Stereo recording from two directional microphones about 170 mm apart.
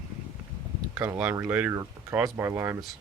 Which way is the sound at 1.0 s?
10° right (ahead or behind).